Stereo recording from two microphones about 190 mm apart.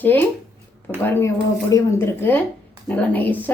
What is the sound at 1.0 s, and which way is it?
A woman's voice, 10° left (ahead or behind).